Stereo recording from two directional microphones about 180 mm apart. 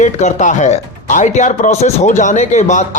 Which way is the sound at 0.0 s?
40° left (ahead or behind).